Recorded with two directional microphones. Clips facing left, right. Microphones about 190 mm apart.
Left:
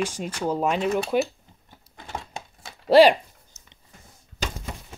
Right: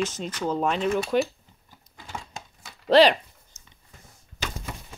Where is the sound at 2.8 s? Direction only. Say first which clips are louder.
Left 3 dB; 10° left (ahead or behind).